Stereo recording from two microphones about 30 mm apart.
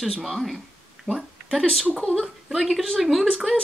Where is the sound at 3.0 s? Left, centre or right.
Centre.